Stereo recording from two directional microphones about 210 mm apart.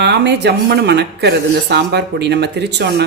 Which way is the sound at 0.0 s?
50° right (ahead or behind).